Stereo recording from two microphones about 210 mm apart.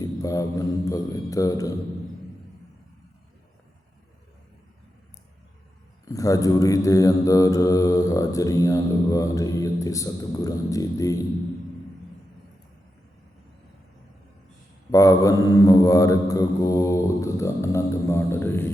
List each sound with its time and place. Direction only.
0.0 s mantra: 15° left (ahead or behind)
6.1 s mantra: 15° left (ahead or behind)
14.8 s mantra: 15° left (ahead or behind)